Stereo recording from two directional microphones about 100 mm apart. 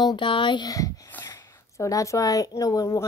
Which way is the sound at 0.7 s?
35° left (ahead or behind).